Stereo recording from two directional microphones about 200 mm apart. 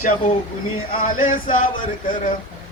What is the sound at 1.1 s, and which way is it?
Speech, 45° left (ahead or behind).